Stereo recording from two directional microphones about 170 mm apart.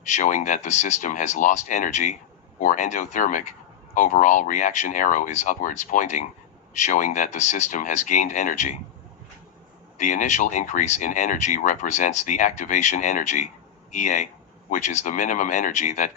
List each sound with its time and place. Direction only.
0.0 s speech: 45° left (ahead or behind)
10.0 s speech: 50° left (ahead or behind)